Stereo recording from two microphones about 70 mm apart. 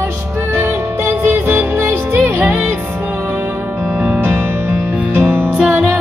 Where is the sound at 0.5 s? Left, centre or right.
Right.